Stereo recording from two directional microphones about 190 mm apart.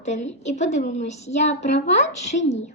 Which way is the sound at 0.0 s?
40° left (ahead or behind).